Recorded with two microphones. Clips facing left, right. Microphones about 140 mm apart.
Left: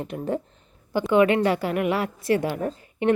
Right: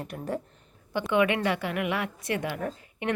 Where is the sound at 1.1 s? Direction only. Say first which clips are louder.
Left 6 dB; 35° left (ahead or behind).